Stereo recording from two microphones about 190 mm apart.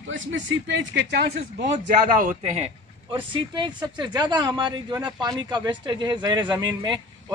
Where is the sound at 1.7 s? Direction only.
45° right (ahead or behind).